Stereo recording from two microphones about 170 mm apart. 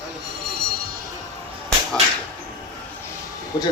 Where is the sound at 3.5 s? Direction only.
25° left (ahead or behind).